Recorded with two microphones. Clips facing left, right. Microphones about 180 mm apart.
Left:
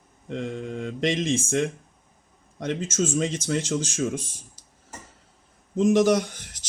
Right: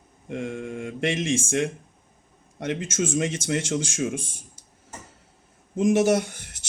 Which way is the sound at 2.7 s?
10° right (ahead or behind).